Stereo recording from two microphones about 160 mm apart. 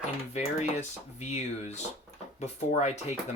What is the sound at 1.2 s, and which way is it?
Speech, 45° left (ahead or behind).